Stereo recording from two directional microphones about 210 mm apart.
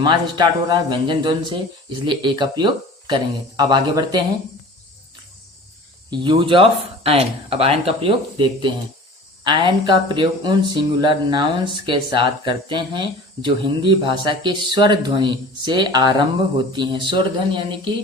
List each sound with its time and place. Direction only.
0.0 s speech: 20° right (ahead or behind)
6.1 s speech: 20° right (ahead or behind)